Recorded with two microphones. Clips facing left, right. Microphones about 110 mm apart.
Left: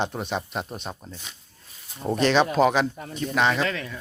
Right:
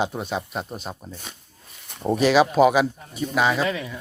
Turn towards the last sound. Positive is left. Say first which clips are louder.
# right 2 dB
turn(degrees=-10)  # may be behind; listen again after turning